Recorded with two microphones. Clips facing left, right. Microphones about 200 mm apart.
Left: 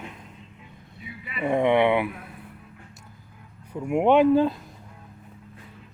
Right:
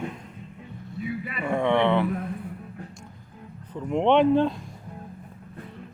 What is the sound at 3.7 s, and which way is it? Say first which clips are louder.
Speech: left 1 dB; 10° left (ahead or behind).